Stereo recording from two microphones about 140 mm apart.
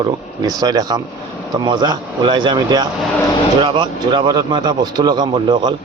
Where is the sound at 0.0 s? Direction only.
25° right (ahead or behind).